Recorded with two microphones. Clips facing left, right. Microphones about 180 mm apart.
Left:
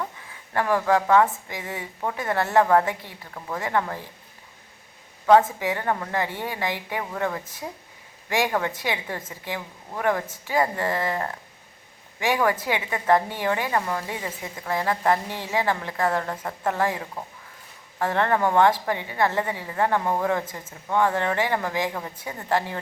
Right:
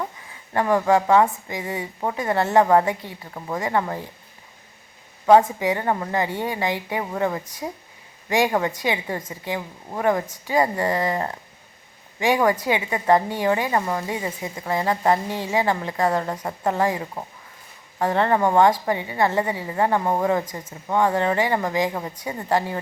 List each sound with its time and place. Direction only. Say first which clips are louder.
0.5 s a woman's voice: right 3 dB; 15° right (ahead or behind)
5.2 s a woman's voice: right 2 dB; 15° right (ahead or behind)